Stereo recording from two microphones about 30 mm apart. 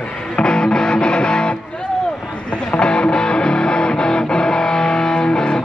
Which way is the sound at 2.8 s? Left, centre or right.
Left.